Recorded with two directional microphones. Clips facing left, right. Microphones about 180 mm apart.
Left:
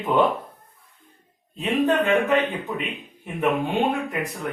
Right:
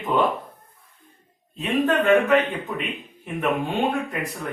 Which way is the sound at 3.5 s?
15° left (ahead or behind).